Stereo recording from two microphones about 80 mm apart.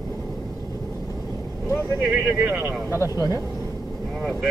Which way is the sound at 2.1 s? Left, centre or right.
Right.